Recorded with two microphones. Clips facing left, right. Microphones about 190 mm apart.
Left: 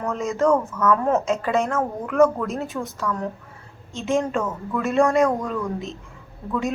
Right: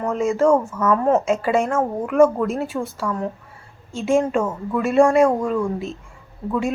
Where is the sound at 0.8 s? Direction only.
10° right (ahead or behind).